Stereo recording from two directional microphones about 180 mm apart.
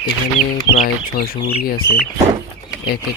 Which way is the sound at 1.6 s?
55° left (ahead or behind).